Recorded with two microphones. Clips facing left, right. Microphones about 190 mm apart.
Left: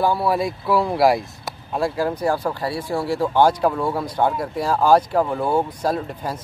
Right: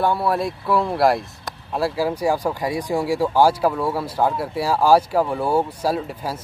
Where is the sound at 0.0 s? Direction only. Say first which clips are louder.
Left 1 dB; centre (ahead or behind).